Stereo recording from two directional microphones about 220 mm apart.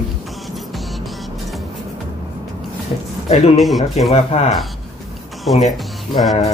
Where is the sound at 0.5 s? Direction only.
Centre (ahead or behind).